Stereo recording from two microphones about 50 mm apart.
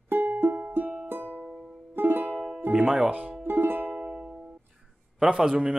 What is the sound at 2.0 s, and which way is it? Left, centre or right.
Music, right.